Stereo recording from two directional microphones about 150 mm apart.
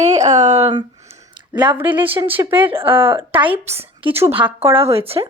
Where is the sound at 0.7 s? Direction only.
30° right (ahead or behind).